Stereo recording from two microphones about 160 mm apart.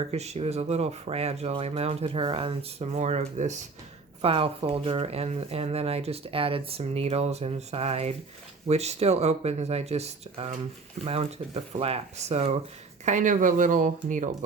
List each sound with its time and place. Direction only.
0.1 s speech: 40° right (ahead or behind)
4.2 s speech: 35° right (ahead or behind); by 14.3 s 50° right (ahead or behind)